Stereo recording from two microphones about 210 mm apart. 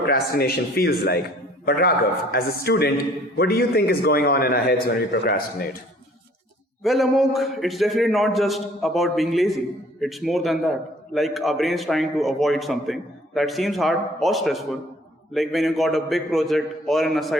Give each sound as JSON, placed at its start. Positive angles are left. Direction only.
{"t": 0.1, "sound": "a man's voice", "side_deg": 45}
{"t": 2.3, "sound": "a man's voice", "side_deg": 45}
{"t": 6.8, "sound": "a man's voice", "side_deg": 0}